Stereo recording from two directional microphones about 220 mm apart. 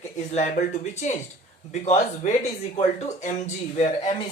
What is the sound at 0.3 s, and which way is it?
Speech, 30° left (ahead or behind).